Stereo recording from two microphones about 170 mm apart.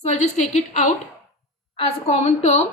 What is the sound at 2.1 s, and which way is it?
Speech, 40° left (ahead or behind).